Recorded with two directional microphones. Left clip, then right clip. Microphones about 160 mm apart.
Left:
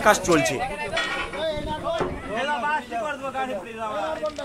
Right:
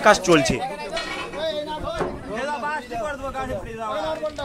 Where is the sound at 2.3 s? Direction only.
45° left (ahead or behind).